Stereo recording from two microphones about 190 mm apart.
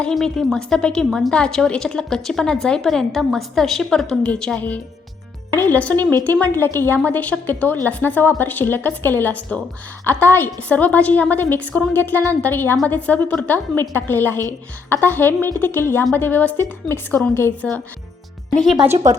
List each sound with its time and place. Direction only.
0.0 s a woman's voice: centre (ahead or behind)
19.1 s speech: 15° right (ahead or behind)